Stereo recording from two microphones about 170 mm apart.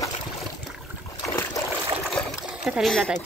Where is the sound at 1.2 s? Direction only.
15° left (ahead or behind).